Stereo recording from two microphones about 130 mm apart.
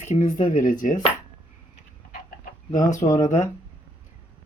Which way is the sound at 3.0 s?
25° left (ahead or behind).